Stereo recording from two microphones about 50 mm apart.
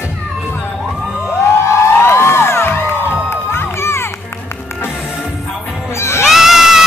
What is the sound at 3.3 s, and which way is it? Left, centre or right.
Crowd, left.